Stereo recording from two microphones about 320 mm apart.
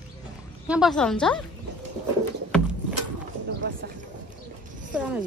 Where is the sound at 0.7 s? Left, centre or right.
Centre.